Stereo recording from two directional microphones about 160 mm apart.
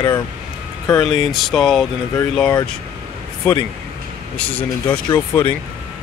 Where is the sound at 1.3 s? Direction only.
Centre (ahead or behind).